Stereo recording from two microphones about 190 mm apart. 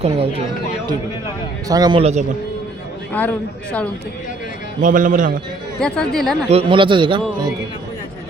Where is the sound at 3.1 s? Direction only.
10° left (ahead or behind).